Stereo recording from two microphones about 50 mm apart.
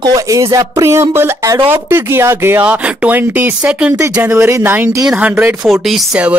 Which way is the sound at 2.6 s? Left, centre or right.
Right.